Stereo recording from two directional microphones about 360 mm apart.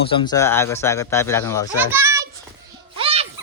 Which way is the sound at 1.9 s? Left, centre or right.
Centre.